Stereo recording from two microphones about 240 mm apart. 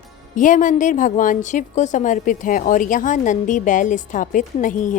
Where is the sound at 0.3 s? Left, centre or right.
Left.